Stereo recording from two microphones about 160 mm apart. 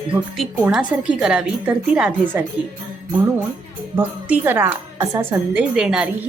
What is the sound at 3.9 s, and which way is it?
A woman's voice, 10° right (ahead or behind).